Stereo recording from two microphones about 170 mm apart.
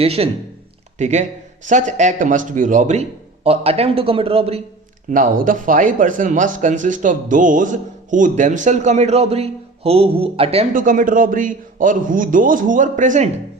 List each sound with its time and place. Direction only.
0.0 s a man's voice: 35° right (ahead or behind)
5.1 s a man's voice: 50° right (ahead or behind); by 10.7 s 35° right (ahead or behind)
10.8 s a man's voice: 50° right (ahead or behind)